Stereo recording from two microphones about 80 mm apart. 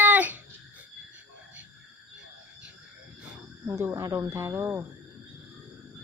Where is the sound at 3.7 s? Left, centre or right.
Right.